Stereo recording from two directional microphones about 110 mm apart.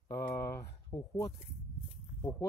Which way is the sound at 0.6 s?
25° left (ahead or behind).